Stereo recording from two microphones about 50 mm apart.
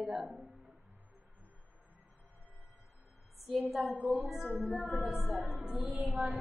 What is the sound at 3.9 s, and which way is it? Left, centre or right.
Music, right.